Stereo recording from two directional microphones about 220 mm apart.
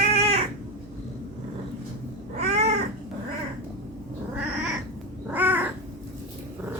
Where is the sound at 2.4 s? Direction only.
30° right (ahead or behind).